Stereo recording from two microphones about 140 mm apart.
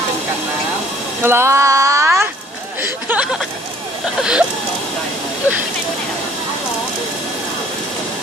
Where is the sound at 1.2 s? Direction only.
20° right (ahead or behind).